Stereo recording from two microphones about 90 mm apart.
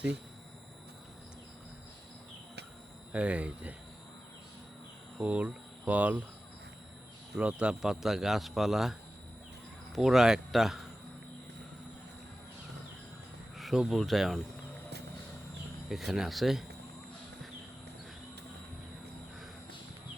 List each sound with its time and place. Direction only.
3.1 s speech: 15° right (ahead or behind)
5.1 s cricket: 15° right (ahead or behind)
7.3 s speech: 10° right (ahead or behind)
13.6 s speech: centre (ahead or behind)
15.9 s speech: 5° right (ahead or behind)